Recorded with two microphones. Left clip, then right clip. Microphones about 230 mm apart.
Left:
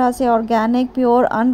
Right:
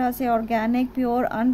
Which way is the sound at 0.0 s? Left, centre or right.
Centre.